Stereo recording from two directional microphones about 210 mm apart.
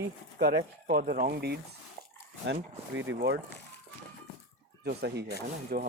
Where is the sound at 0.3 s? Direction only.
50° right (ahead or behind).